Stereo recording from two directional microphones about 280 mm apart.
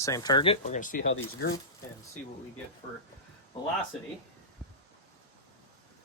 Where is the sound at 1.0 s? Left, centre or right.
Left.